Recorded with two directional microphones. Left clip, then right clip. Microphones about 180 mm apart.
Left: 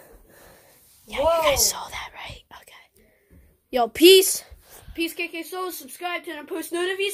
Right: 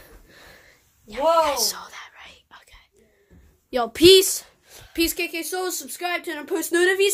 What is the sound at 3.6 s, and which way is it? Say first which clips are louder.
Speech: even; 10° left (ahead or behind).